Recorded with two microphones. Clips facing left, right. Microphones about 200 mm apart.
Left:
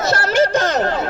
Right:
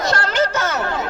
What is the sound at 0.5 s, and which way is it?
Chatter, 35° left (ahead or behind).